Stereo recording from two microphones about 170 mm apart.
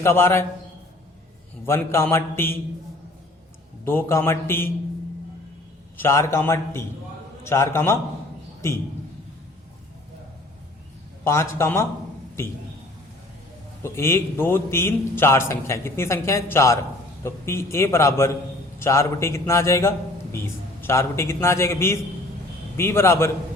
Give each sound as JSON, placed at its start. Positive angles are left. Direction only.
{"t": 0.0, "sound": "a man's voice", "side_deg": 15}
{"t": 1.6, "sound": "a man's voice", "side_deg": 15}
{"t": 3.8, "sound": "a man's voice", "side_deg": 15}
{"t": 6.0, "sound": "a man's voice", "side_deg": 15}
{"t": 11.2, "sound": "a man's voice", "side_deg": 15}
{"t": 13.8, "sound": "a man's voice", "side_deg": 15}